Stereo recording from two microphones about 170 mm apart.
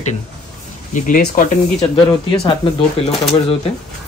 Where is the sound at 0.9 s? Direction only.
50° left (ahead or behind).